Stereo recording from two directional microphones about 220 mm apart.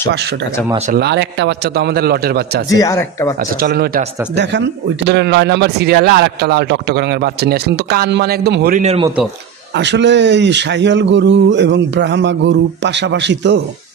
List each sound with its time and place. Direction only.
0.9 s speech: 50° right (ahead or behind)
2.7 s speech: 15° left (ahead or behind)
3.3 s speech: 40° right (ahead or behind)